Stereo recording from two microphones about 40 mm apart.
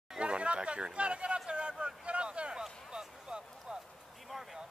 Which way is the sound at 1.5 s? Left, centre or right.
Right.